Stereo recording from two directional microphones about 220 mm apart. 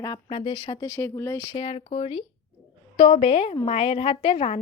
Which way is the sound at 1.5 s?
25° left (ahead or behind).